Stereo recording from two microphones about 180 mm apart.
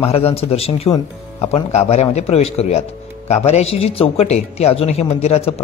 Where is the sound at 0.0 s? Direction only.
35° left (ahead or behind).